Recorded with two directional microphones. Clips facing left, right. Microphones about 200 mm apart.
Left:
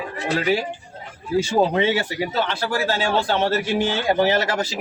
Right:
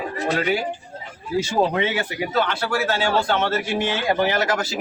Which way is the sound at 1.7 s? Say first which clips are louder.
Left 3 dB; 30° left (ahead or behind).